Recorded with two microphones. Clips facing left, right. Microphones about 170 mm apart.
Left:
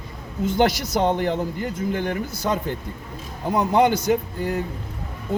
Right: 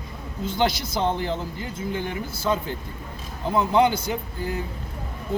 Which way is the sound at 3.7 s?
50° left (ahead or behind).